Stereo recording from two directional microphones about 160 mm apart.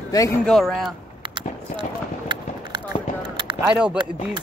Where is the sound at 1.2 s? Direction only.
30° right (ahead or behind).